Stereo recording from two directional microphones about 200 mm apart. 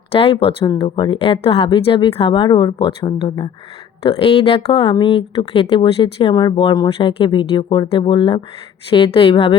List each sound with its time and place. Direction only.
0.1 s speech: 30° left (ahead or behind)